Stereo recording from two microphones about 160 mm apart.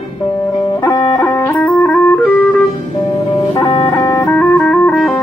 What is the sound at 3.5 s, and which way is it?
Music, 35° left (ahead or behind).